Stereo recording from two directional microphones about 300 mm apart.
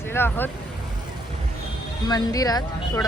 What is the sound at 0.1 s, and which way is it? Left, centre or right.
Speech, centre.